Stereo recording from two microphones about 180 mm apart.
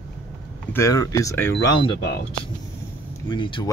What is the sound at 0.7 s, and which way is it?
Speech, 15° left (ahead or behind).